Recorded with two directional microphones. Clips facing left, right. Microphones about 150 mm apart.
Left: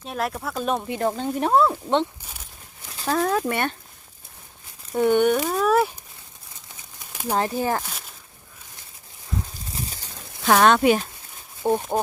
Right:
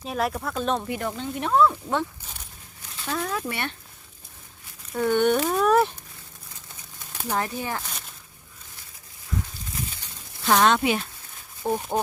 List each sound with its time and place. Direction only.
0.0 s speech: centre (ahead or behind)
0.9 s speech: 35° left (ahead or behind)
3.0 s speech: 45° left (ahead or behind)
4.9 s speech: 20° left (ahead or behind)
5.3 s speech: centre (ahead or behind)
7.3 s speech: 30° left (ahead or behind)
9.7 s a sound: 35° left (ahead or behind)
10.4 s speech: 60° left (ahead or behind)
11.6 s speech: 25° left (ahead or behind)